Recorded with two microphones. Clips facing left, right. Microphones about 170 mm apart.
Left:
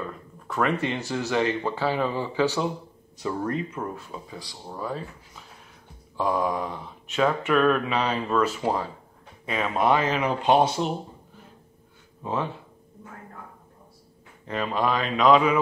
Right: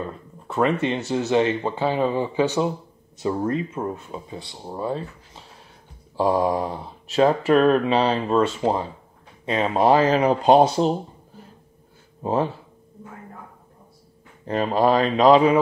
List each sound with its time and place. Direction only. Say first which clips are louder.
0.0 s speech: right 3 dB; 25° right (ahead or behind)
12.2 s speech: right 6 dB; 35° right (ahead or behind)
14.4 s speech: right 6 dB; 40° right (ahead or behind)